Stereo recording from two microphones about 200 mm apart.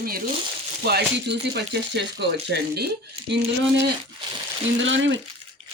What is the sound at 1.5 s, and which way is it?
Speech, 60° right (ahead or behind).